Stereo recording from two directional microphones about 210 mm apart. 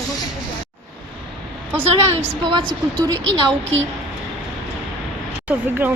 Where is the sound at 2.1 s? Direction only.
25° right (ahead or behind).